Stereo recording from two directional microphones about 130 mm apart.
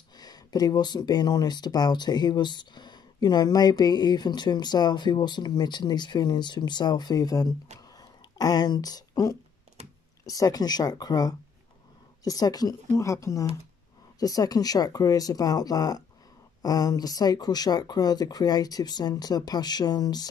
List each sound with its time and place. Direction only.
0.2 s speech: 30° left (ahead or behind)
7.9 s a sound: 30° left (ahead or behind)
9.8 s computer keyboard: 55° right (ahead or behind)
10.2 s speech: 30° left (ahead or behind)